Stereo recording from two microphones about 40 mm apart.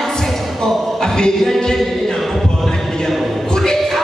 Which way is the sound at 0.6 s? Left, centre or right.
Centre.